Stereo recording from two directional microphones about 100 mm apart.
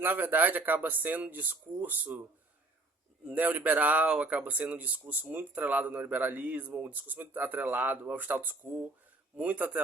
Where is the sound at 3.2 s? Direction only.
15° right (ahead or behind).